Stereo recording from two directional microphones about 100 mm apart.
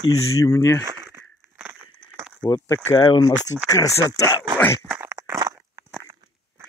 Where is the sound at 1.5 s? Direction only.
20° right (ahead or behind).